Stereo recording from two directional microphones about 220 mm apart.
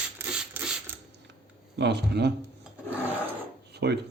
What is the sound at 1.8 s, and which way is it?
Speech, 50° right (ahead or behind).